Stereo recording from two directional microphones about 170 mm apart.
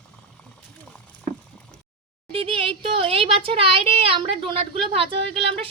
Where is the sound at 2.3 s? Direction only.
30° right (ahead or behind).